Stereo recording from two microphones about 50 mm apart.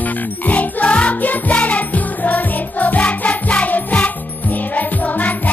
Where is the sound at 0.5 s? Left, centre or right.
Left.